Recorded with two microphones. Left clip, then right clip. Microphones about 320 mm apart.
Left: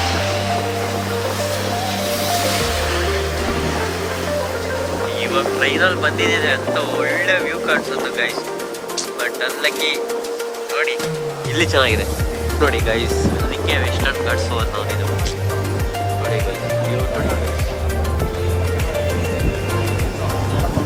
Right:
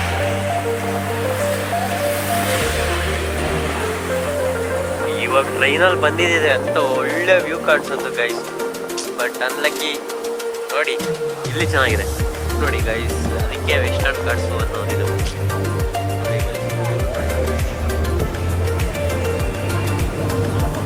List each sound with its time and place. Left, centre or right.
5.2 s speech: centre
9.2 s speech: centre
11.5 s speech: centre
13.7 s speech: centre